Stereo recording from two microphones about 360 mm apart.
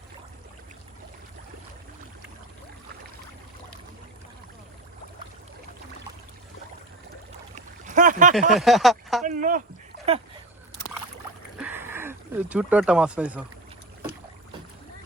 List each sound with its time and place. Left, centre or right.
7.5 s boat: right
8.4 s speech: centre
9.2 s speech: right
11.5 s a sound: centre